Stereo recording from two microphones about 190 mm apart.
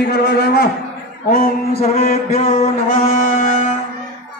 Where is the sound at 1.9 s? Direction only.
40° left (ahead or behind).